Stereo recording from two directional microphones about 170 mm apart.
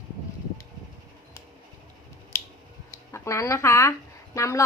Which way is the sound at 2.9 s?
15° left (ahead or behind).